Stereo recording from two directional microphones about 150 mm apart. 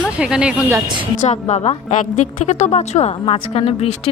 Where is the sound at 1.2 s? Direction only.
50° left (ahead or behind).